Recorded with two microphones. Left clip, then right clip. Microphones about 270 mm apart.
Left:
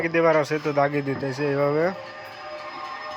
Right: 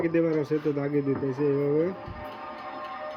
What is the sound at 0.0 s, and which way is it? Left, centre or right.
Speech, centre.